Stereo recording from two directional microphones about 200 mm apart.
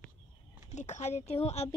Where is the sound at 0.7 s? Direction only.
35° left (ahead or behind).